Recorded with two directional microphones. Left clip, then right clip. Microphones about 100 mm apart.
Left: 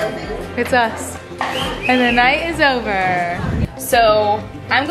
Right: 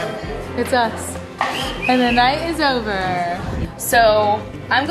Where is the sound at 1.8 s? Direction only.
15° left (ahead or behind).